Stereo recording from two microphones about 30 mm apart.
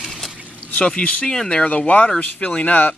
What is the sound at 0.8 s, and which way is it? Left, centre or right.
Speech, left.